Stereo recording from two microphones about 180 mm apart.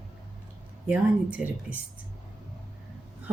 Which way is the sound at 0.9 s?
5° right (ahead or behind).